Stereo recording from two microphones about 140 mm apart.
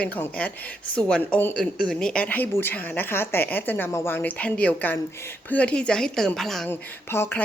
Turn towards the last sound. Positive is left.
turn(degrees=15)  # may be behind; listen again after turning